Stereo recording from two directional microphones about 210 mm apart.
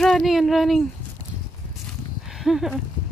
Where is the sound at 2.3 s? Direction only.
Centre (ahead or behind).